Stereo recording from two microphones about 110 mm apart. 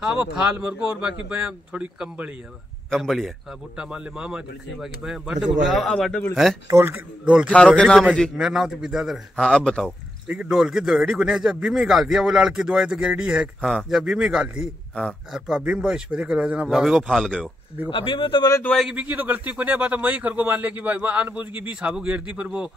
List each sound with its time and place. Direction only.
0.0 s speech: 10° right (ahead or behind)
2.9 s a man's voice: centre (ahead or behind)
6.7 s a man's voice: 25° right (ahead or behind)
7.4 s a man's voice: 10° left (ahead or behind)
8.4 s a man's voice: 5° right (ahead or behind)
9.8 s a man's voice: 15° right (ahead or behind)
13.6 s a man's voice: centre (ahead or behind)
17.8 s speech: 50° left (ahead or behind)
18.8 s speech: 10° right (ahead or behind)